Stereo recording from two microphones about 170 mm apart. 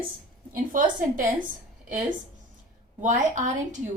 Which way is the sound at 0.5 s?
50° right (ahead or behind).